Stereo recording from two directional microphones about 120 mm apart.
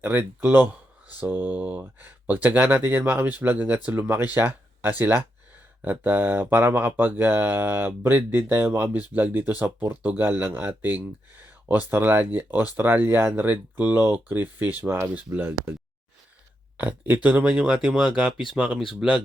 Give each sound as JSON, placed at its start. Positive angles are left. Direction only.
{"t": 0.0, "sound": "speech", "side_deg": -15}
{"t": 16.7, "sound": "speech", "side_deg": -15}